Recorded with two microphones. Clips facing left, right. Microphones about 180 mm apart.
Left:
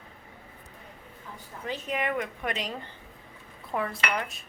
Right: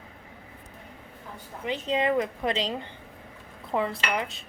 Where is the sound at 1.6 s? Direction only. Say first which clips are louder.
Right 5 dB; 25° right (ahead or behind).